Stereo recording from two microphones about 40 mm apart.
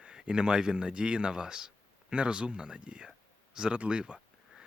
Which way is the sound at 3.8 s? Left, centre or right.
Right.